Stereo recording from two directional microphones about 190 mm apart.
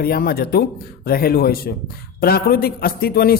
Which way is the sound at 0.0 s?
55° left (ahead or behind).